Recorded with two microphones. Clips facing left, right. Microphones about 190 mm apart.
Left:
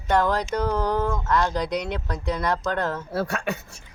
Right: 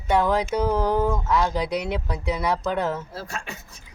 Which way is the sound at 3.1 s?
60° left (ahead or behind).